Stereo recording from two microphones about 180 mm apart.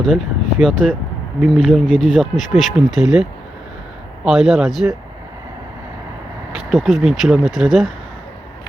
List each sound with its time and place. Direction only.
0.6 s speech: centre (ahead or behind)
6.7 s speech: centre (ahead or behind)